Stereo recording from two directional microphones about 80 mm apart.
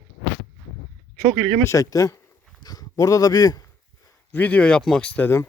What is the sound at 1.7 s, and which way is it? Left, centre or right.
Speech, left.